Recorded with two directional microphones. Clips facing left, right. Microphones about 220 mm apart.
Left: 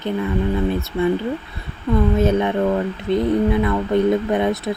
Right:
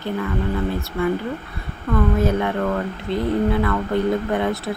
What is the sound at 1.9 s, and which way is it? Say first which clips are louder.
Speech: left 3 dB; 20° left (ahead or behind).